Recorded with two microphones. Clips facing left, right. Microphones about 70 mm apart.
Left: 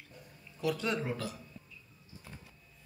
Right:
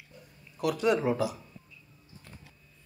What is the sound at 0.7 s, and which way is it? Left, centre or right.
Speech, centre.